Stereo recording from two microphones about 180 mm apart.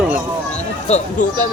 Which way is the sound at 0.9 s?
40° left (ahead or behind).